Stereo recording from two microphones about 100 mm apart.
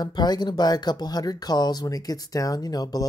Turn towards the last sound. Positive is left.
turn(degrees=40)  # may be behind; listen again after turning